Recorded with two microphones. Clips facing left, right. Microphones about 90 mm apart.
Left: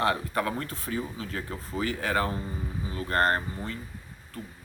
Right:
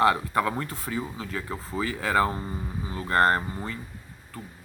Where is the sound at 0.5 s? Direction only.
25° right (ahead or behind).